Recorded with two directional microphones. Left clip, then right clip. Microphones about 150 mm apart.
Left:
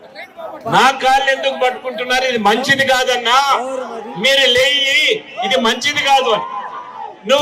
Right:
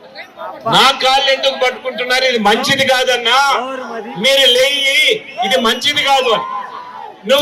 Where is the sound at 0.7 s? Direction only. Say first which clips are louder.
Right 1 dB; centre (ahead or behind).